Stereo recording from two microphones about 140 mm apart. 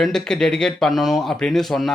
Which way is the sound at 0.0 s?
5° left (ahead or behind).